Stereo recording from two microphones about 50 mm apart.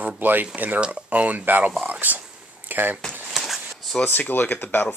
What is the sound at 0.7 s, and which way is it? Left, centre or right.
Speech, right.